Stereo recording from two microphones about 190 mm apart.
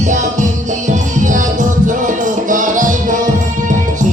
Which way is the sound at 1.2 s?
45° right (ahead or behind).